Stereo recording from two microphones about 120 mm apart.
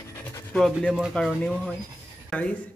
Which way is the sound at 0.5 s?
5° left (ahead or behind).